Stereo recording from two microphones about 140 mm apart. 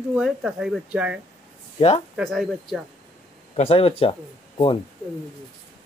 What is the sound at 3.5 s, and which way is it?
Speech, 45° left (ahead or behind).